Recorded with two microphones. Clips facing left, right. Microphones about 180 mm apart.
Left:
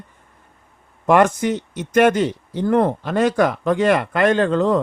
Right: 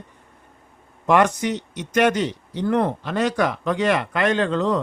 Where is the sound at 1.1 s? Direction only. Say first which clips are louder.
Left 3 dB; 50° left (ahead or behind).